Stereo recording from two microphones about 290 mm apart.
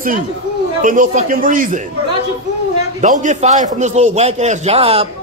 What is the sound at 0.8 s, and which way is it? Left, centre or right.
Speech, right.